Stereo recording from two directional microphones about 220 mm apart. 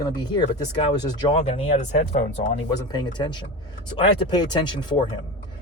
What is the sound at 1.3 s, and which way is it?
Speech, 30° left (ahead or behind).